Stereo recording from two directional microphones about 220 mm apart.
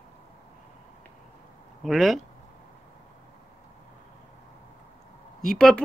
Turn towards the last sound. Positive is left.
turn(degrees=0)  # may be behind; listen again after turning